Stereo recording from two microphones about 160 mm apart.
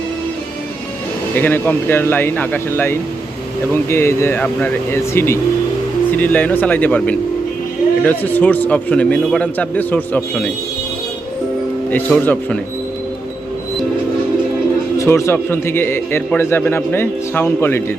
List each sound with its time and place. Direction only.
1.4 s a man's voice: 15° left (ahead or behind)
11.9 s a man's voice: 10° left (ahead or behind)
14.9 s a man's voice: 15° left (ahead or behind)